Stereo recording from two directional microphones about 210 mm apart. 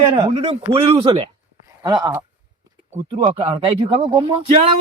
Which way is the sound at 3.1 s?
30° right (ahead or behind).